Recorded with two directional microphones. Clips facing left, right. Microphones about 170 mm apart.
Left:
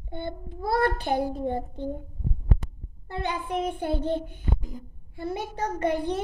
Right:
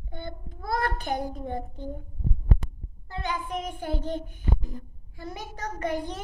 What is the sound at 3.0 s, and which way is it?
A child's voice, 30° left (ahead or behind).